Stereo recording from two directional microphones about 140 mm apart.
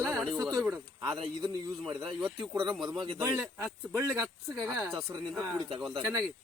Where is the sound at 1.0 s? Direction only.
35° right (ahead or behind).